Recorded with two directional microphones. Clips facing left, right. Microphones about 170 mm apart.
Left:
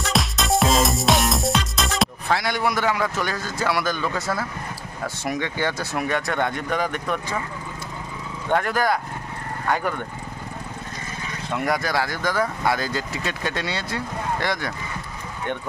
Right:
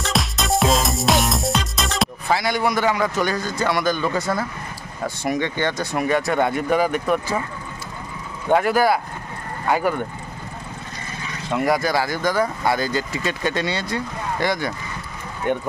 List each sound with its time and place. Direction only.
0.0 s music: centre (ahead or behind)
5.0 s speech: centre (ahead or behind)
8.5 s speech: 10° right (ahead or behind)
11.5 s speech: centre (ahead or behind)